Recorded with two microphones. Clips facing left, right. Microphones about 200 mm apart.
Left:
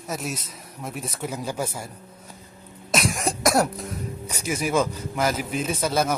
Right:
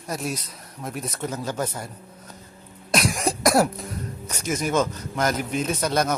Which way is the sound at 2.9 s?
Centre (ahead or behind).